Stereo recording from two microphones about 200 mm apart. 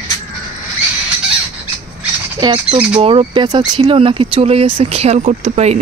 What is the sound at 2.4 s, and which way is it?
Speech, 25° right (ahead or behind).